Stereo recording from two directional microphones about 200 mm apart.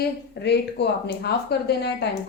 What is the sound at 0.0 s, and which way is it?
Speech, 55° left (ahead or behind).